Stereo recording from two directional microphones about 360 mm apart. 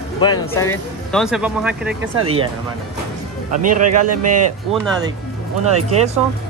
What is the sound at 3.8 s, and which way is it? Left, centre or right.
Speech, right.